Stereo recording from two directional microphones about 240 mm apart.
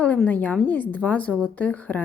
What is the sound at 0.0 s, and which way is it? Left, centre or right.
A woman's voice, centre.